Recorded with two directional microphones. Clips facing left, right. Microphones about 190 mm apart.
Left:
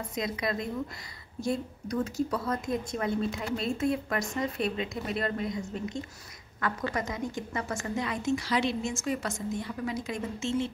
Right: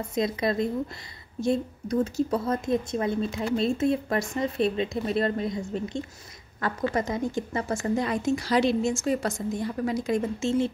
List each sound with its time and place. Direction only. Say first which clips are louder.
0.1 s a woman's voice: right 6 dB; 30° right (ahead or behind)